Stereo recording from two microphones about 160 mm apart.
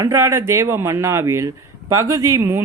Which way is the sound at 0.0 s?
20° right (ahead or behind).